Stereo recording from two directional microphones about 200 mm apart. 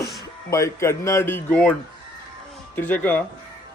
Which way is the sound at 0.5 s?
15° left (ahead or behind).